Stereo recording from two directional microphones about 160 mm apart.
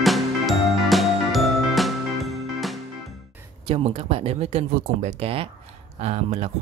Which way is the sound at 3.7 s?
35° right (ahead or behind).